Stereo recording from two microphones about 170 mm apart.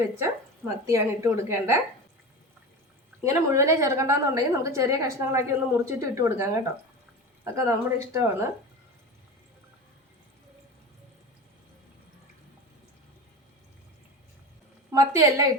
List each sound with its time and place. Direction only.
0.9 s a woman's voice: 15° right (ahead or behind)
3.2 s a woman's voice: 15° right (ahead or behind)
14.9 s a woman's voice: 20° right (ahead or behind)